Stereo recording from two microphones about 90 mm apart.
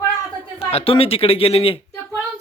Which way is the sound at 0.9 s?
90° left.